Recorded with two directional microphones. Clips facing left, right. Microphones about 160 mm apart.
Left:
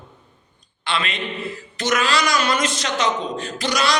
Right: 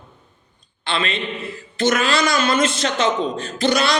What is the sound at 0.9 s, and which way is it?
A man's voice, 30° right (ahead or behind).